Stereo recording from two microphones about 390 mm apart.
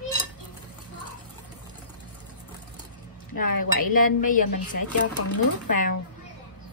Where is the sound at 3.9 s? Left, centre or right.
Left.